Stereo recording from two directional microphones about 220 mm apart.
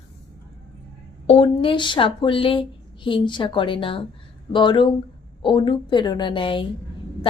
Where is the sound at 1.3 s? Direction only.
25° left (ahead or behind).